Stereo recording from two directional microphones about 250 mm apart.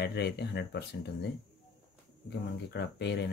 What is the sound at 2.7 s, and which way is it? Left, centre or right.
Speech, left.